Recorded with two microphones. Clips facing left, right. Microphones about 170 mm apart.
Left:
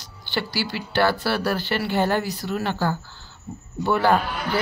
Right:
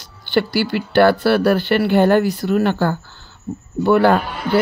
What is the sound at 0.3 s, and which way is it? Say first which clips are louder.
Speech: right 9 dB; 55° right (ahead or behind).